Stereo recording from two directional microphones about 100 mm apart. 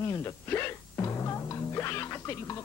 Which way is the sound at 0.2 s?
30° left (ahead or behind).